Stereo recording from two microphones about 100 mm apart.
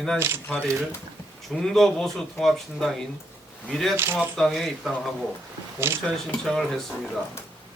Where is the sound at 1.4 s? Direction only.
5° left (ahead or behind).